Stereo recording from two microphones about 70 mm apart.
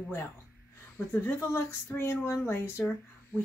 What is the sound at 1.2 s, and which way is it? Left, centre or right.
Speech, left.